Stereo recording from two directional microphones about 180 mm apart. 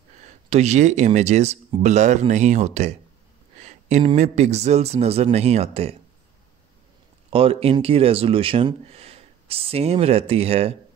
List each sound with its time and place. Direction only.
0.5 s speech: 40° right (ahead or behind)
3.5 s a sound: 40° right (ahead or behind)
4.1 s speech: 40° right (ahead or behind)
7.2 s speech: 30° right (ahead or behind)